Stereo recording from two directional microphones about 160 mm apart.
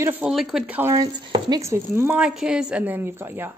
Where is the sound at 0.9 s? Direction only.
25° right (ahead or behind).